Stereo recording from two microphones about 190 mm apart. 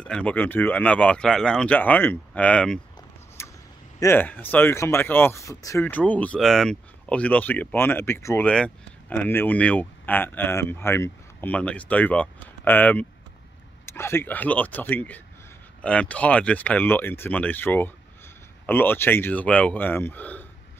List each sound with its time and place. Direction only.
0.0 s speech: 5° left (ahead or behind)
3.4 s vehicle: 15° left (ahead or behind)
4.0 s speech: 10° left (ahead or behind)